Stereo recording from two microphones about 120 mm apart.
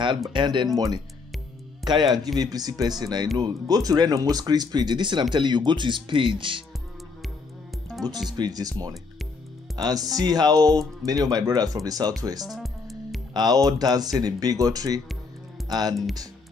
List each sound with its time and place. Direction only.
0.3 s speech: 40° right (ahead or behind)
8.3 s speech: 35° right (ahead or behind)
12.4 s music: centre (ahead or behind)
13.3 s speech: 35° right (ahead or behind)